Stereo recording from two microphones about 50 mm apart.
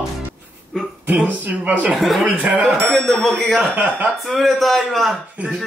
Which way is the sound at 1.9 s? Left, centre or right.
Centre.